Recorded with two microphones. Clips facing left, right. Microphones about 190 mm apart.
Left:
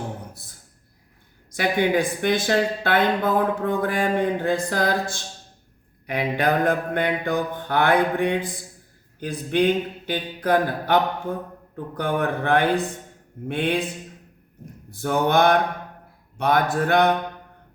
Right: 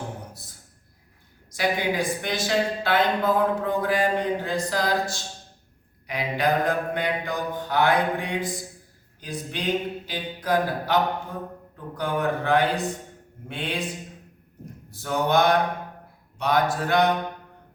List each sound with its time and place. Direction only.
1.5 s a woman's voice: 55° left (ahead or behind)
6.1 s mantra: 55° left (ahead or behind)
14.8 s mantra: 55° left (ahead or behind)
16.4 s a woman's voice: 55° left (ahead or behind)